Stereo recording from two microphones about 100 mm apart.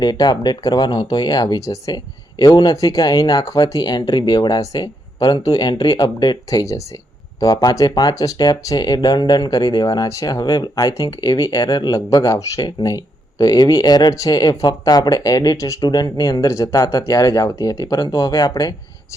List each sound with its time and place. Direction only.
0.0 s speech: 45° left (ahead or behind)
2.4 s speech: 45° left (ahead or behind)
11.9 s speech: 35° left (ahead or behind)